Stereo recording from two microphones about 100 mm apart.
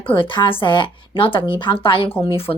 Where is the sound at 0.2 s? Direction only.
60° left (ahead or behind).